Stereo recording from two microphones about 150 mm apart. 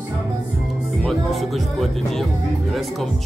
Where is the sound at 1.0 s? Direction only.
Centre (ahead or behind).